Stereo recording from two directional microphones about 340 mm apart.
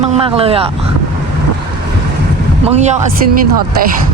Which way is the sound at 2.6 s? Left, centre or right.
Centre.